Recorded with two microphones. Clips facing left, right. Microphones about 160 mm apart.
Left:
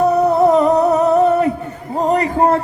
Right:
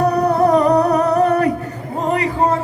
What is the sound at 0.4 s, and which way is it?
Humming, 20° left (ahead or behind).